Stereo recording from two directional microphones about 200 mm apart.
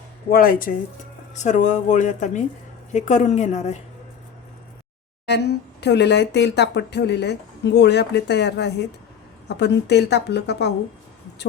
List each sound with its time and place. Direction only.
0.3 s speech: 45° left (ahead or behind)
5.2 s speech: 55° left (ahead or behind)